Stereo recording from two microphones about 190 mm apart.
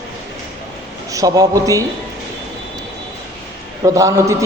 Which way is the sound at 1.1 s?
20° right (ahead or behind).